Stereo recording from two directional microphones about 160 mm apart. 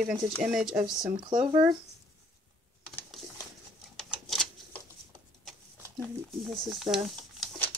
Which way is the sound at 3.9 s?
Centre (ahead or behind).